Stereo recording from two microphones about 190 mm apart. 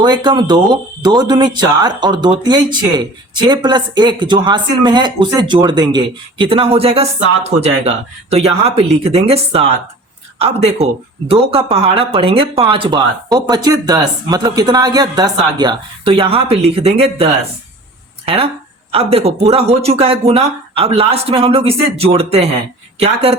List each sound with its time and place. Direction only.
0.0 s speech: 25° right (ahead or behind)
18.3 s speech: 30° right (ahead or behind)